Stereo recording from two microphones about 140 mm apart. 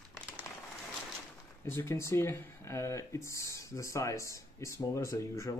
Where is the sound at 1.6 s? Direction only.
15° left (ahead or behind).